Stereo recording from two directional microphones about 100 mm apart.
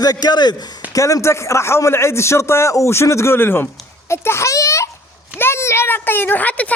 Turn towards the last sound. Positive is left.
turn(degrees=15)  # may be behind; listen again after turning